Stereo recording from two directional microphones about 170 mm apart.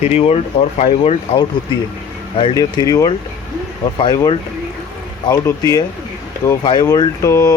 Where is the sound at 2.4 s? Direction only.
25° left (ahead or behind).